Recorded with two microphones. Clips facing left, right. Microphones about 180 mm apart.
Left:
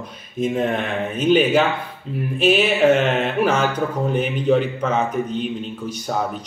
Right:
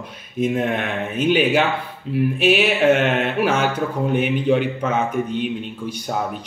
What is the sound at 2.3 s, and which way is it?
Music, 5° right (ahead or behind).